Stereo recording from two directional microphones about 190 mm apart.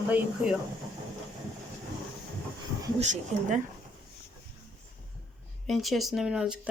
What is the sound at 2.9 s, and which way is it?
Speech, 40° right (ahead or behind).